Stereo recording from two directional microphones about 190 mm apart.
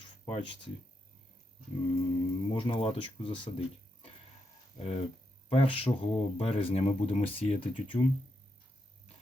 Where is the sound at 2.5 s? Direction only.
25° left (ahead or behind).